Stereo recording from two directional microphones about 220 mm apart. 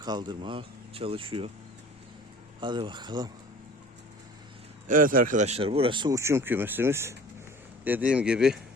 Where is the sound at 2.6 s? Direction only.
20° right (ahead or behind).